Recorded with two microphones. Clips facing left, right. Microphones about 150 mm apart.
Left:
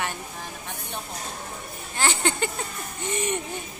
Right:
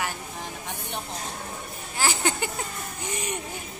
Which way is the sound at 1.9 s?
10° right (ahead or behind).